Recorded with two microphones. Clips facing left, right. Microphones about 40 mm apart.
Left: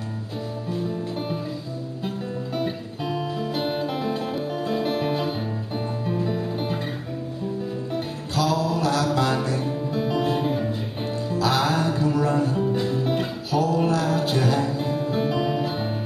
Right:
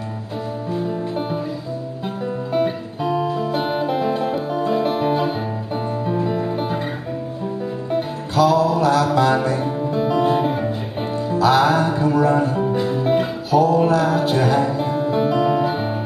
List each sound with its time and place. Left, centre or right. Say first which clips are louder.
0.7 s music: right 5 dB; centre
2.5 s music: right 9 dB; centre
8.4 s music: right 7 dB; centre